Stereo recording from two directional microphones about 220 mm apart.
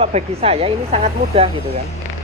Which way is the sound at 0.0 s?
25° right (ahead or behind).